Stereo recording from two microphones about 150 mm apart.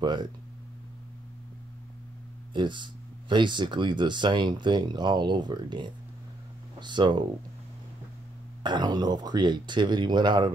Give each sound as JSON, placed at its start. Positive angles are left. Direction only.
{"t": 0.0, "sound": "speech", "side_deg": -30}
{"t": 2.5, "sound": "speech", "side_deg": -30}
{"t": 8.6, "sound": "speech", "side_deg": -30}